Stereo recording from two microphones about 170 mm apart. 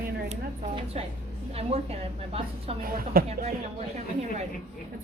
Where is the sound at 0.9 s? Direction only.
40° right (ahead or behind).